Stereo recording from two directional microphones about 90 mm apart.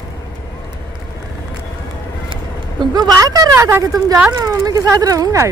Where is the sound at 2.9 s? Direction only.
45° right (ahead or behind).